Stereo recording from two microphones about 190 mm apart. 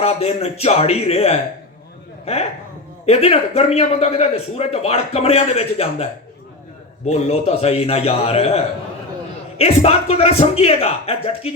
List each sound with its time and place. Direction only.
0.0 s a man's voice: 35° left (ahead or behind)